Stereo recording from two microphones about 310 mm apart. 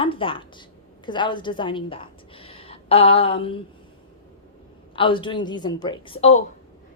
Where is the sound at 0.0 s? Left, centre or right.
Centre.